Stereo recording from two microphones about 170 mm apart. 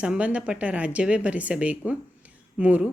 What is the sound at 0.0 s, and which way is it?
A woman's voice, 5° right (ahead or behind).